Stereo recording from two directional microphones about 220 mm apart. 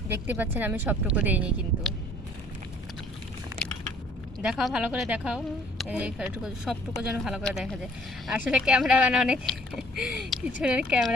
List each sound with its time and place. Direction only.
0.3 s speech: 10° right (ahead or behind)
3.5 s a sound: 15° right (ahead or behind)
4.4 s speech: centre (ahead or behind)